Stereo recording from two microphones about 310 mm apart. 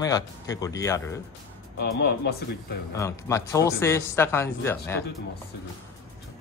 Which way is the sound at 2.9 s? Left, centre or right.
Centre.